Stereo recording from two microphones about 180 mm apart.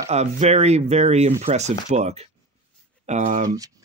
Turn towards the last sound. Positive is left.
turn(degrees=-20)  # may be behind; listen again after turning